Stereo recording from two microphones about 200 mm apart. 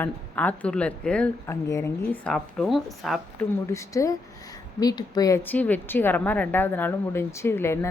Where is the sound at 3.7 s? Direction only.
15° left (ahead or behind).